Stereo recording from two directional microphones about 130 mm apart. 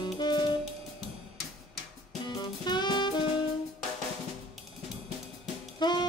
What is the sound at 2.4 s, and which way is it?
Music, 35° left (ahead or behind).